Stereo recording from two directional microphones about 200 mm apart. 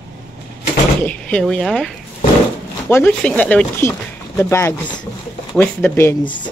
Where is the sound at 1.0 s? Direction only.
5° left (ahead or behind).